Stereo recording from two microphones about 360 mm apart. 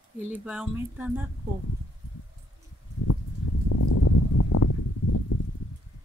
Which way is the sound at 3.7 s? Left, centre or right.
Left.